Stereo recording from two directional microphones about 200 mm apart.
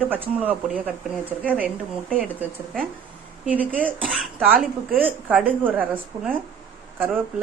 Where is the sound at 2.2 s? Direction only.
5° right (ahead or behind).